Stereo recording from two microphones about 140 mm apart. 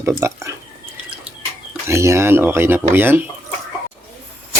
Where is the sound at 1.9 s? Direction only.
20° right (ahead or behind).